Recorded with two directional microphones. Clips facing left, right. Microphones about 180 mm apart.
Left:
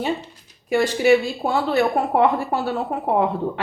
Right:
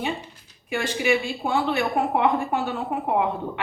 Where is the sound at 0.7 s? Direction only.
35° left (ahead or behind).